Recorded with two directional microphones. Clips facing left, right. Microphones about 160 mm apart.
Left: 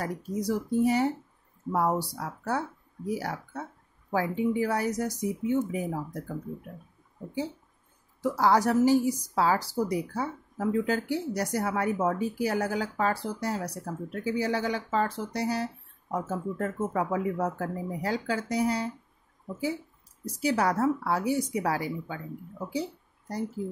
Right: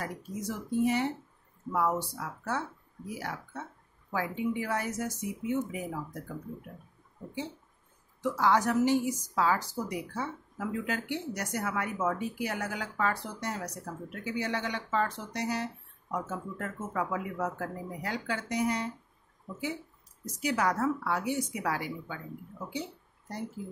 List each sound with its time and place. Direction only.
0.0 s speech: 40° left (ahead or behind)
8.2 s speech: 35° left (ahead or behind)
20.3 s speech: 30° left (ahead or behind)
22.7 s a sound: 35° left (ahead or behind)